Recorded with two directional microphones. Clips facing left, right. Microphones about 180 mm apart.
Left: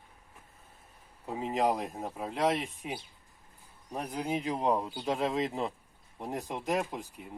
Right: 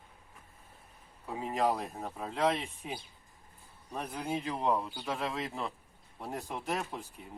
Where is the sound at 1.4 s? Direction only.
20° left (ahead or behind).